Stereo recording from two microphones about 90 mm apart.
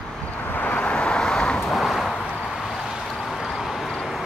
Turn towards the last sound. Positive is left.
turn(degrees=-5)  # may be behind; listen again after turning